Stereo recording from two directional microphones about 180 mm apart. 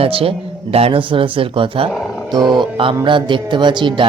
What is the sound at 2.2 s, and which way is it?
Speech, 25° right (ahead or behind).